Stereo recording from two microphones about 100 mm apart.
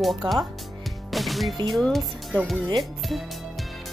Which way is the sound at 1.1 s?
Centre (ahead or behind).